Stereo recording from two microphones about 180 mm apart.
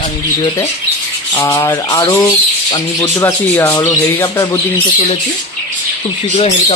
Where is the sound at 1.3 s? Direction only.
15° left (ahead or behind).